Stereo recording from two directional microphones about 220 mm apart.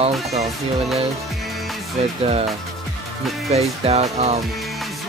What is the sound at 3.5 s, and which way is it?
Speech, 30° right (ahead or behind).